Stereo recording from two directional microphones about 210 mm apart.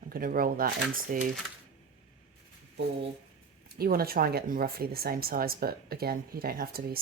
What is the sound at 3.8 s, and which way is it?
Speech, 45° right (ahead or behind).